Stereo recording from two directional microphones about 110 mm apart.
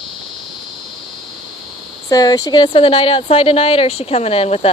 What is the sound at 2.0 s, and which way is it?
Speech, 35° left (ahead or behind).